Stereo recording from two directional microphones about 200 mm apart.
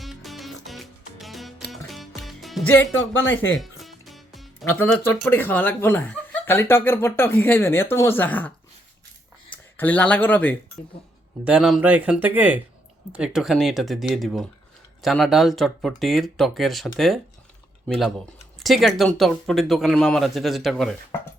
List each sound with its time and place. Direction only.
0.0 s music: centre (ahead or behind)
3.2 s speech: 70° left (ahead or behind)
3.6 s music: centre (ahead or behind)
4.8 s speech: 10° left (ahead or behind)
9.7 s speech: 10° left (ahead or behind)
11.4 s speech: 5° right (ahead or behind)